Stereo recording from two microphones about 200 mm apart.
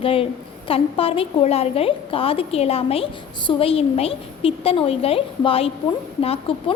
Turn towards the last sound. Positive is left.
turn(degrees=30)  # may be behind; listen again after turning